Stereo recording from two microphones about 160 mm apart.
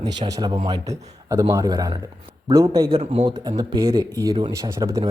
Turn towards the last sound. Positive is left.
turn(degrees=-20)  # may be behind; listen again after turning